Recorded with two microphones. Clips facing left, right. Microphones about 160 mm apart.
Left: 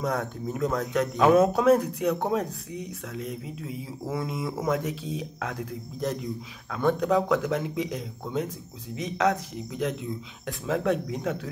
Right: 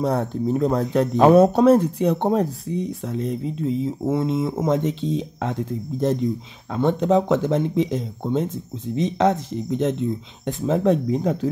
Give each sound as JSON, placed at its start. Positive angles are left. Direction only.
{"t": 0.0, "sound": "speech", "side_deg": -30}